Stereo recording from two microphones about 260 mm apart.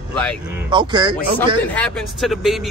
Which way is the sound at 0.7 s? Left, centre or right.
Centre.